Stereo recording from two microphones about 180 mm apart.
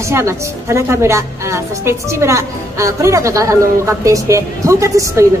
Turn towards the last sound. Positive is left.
turn(degrees=-15)  # may be behind; listen again after turning